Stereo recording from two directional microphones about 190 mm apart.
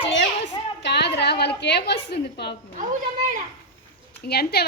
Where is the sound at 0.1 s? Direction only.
65° left (ahead or behind).